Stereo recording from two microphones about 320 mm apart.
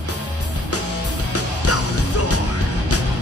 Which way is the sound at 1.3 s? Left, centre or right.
Left.